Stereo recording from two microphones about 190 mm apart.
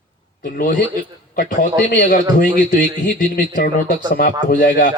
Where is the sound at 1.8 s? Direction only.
45° left (ahead or behind).